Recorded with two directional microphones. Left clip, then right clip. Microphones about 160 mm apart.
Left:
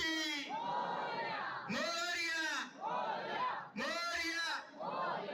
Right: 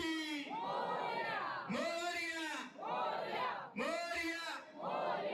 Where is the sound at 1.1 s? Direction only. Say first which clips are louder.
Even; 75° right (ahead or behind).